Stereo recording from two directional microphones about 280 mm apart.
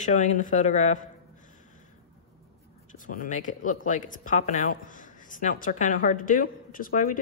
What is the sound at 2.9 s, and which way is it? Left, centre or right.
Speech, left.